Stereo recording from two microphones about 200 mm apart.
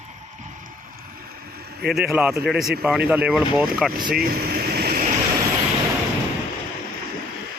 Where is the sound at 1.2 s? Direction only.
50° right (ahead or behind).